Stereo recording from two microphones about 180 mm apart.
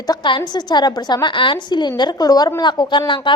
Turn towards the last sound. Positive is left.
turn(degrees=25)  # may be behind; listen again after turning